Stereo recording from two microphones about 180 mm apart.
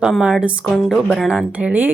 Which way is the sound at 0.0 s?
5° right (ahead or behind).